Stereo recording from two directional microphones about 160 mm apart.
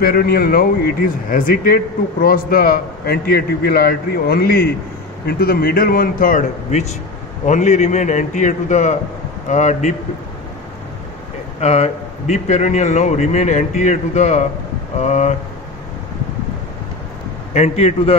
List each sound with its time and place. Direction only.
0.0 s a man's voice: 70° left (ahead or behind); by 9.9 s 50° left (ahead or behind)
11.6 s a man's voice: 45° left (ahead or behind)
17.6 s a man's voice: 40° left (ahead or behind)